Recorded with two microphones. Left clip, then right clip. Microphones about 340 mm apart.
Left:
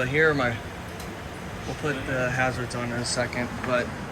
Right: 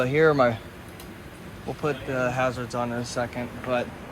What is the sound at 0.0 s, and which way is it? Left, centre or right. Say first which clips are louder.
Speech: right 2 dB; centre.